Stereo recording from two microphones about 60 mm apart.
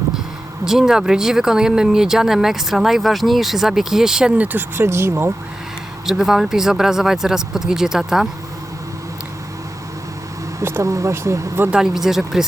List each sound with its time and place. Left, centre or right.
0.6 s speech: centre
4.8 s speech: right
6.1 s speech: centre
10.6 s speech: right
11.7 s speech: centre